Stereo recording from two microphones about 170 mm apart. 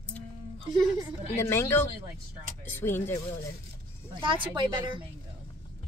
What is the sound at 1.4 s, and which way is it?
A woman's voice, 15° left (ahead or behind).